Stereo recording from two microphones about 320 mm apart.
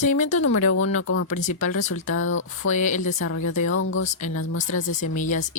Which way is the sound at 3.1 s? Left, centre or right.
Left.